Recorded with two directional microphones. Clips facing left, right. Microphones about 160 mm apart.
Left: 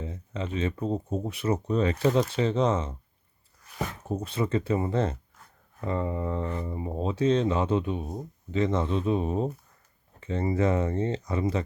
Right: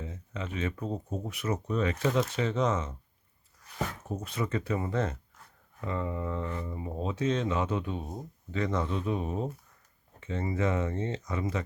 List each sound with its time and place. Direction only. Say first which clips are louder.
0.0 s speech: left 4 dB; 30° left (ahead or behind)
4.1 s speech: left 7 dB; 30° left (ahead or behind)